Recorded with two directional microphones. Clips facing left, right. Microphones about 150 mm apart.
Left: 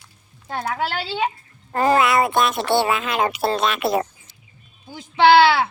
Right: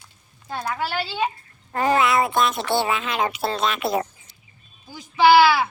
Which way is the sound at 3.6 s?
75° left (ahead or behind).